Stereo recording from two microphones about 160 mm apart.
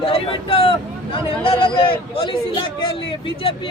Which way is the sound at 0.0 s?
35° left (ahead or behind).